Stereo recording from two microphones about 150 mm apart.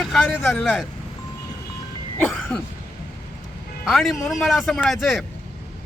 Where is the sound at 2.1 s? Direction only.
10° left (ahead or behind).